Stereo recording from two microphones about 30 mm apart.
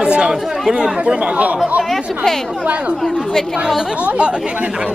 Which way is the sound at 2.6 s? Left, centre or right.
Right.